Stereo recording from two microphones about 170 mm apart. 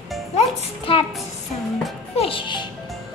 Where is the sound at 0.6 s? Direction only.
35° left (ahead or behind).